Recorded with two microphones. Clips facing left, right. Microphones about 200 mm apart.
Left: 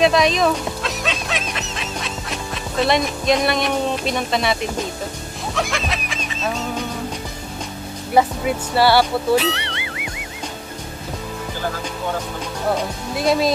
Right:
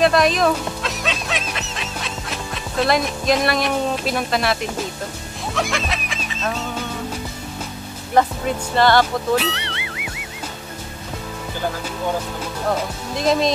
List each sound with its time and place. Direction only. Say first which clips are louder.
0.0 s speech: even; centre (ahead or behind)
5.5 s music: even; centre (ahead or behind)
8.1 s speech: left 1 dB; 10° left (ahead or behind)
13.1 s speech: even; 5° left (ahead or behind)